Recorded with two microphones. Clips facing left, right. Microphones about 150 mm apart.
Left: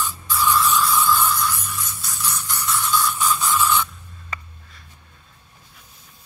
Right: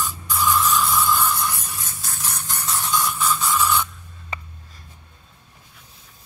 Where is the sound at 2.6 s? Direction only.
35° right (ahead or behind).